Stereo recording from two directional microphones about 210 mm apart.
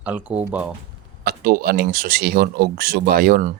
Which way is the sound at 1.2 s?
45° right (ahead or behind).